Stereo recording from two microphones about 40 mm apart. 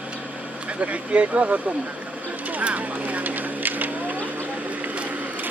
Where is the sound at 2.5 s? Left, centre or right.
Right.